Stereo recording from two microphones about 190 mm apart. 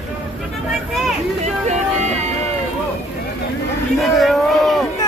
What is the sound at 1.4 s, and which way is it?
Speech, 35° right (ahead or behind).